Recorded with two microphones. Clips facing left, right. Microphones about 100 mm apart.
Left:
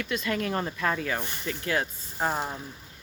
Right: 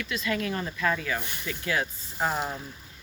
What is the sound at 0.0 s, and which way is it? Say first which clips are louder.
Speech: left 1 dB; 45° left (ahead or behind).